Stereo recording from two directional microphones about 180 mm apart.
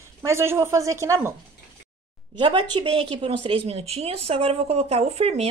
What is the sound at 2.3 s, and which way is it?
A woman's voice, 25° right (ahead or behind).